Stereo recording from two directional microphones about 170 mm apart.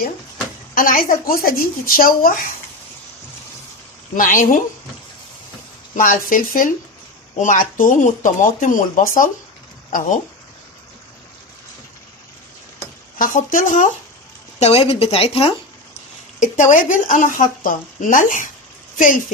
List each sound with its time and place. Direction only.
0.7 s speech: 55° left (ahead or behind)
4.1 s speech: 55° left (ahead or behind)
5.9 s speech: 55° left (ahead or behind)
13.1 s speech: 55° left (ahead or behind)
14.6 s speech: 35° left (ahead or behind)
16.4 s speech: 45° left (ahead or behind)